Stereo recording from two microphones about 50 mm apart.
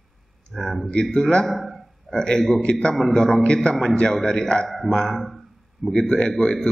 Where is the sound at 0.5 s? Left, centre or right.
Centre.